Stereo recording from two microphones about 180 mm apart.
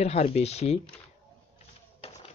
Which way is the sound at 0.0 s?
35° left (ahead or behind).